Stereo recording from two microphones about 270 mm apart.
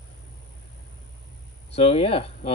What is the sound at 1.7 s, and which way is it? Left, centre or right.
Speech, left.